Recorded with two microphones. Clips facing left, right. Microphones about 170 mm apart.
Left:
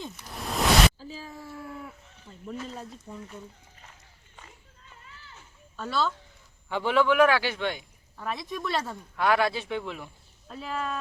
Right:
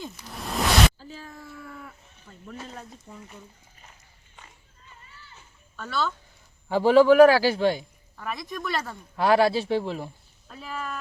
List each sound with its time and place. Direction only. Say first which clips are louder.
0.0 s cat: right 1 dB; centre (ahead or behind)
3.1 s speech: left 3 dB; centre (ahead or behind)
5.9 s speech: even; centre (ahead or behind)
6.7 s a man's voice: right 7 dB; 35° right (ahead or behind)
8.2 s speech: even; centre (ahead or behind)
9.1 s a man's voice: right 5 dB; 35° right (ahead or behind)
10.5 s speech: left 2 dB; 5° right (ahead or behind)